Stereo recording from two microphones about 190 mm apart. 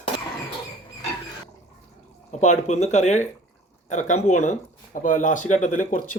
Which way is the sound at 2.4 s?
40° left (ahead or behind).